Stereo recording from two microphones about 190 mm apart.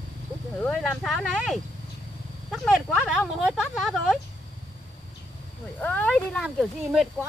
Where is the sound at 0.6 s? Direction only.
Centre (ahead or behind).